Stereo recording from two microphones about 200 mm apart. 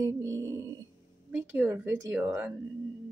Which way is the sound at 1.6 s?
10° right (ahead or behind).